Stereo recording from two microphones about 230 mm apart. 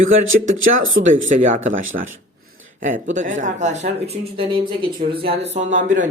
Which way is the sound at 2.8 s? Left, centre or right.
Right.